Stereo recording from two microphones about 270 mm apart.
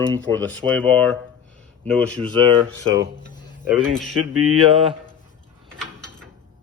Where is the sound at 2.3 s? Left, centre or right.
Centre.